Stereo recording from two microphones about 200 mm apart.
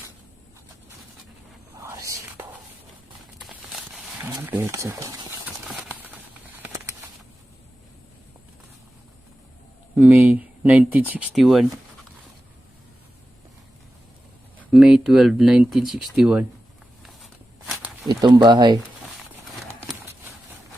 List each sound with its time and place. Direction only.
1.8 s whispering: 15° right (ahead or behind)
3.3 s a sound: centre (ahead or behind)
4.3 s speech: 15° right (ahead or behind)
5.6 s a sound: 5° right (ahead or behind)
9.9 s speech: 5° right (ahead or behind)
14.6 s speech: centre (ahead or behind)
17.0 s walk: centre (ahead or behind)
18.1 s speech: 20° right (ahead or behind)